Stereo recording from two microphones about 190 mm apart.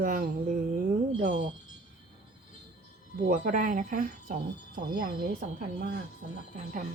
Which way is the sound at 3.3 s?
45° right (ahead or behind).